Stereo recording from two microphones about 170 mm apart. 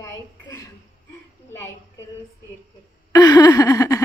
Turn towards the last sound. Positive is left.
turn(degrees=20)  # may be behind; listen again after turning